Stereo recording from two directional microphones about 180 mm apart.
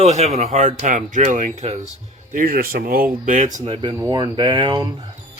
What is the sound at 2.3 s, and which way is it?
Speech, 55° right (ahead or behind).